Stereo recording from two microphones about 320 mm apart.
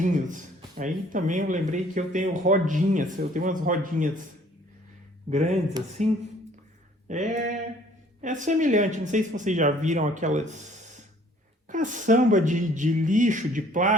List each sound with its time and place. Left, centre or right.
0.0 s speech: right
5.3 s speech: right
7.1 s speech: right